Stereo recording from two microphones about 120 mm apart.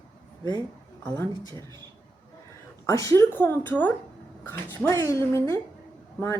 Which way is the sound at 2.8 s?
25° left (ahead or behind).